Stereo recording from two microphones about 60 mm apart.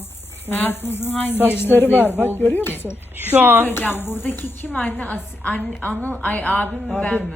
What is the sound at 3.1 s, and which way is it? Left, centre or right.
Speech, right.